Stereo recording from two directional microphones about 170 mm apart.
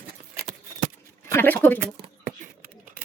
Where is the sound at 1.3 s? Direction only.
10° left (ahead or behind).